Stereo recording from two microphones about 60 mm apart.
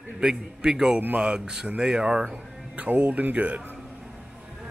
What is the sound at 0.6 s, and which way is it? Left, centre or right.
Speech, centre.